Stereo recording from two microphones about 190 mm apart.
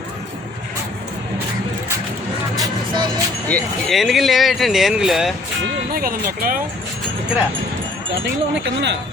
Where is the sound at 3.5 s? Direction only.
Centre (ahead or behind).